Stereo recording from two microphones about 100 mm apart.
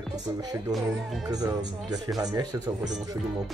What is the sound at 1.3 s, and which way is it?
Speech, 40° right (ahead or behind).